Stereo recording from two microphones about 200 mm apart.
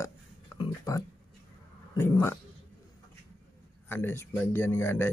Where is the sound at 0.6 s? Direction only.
15° left (ahead or behind).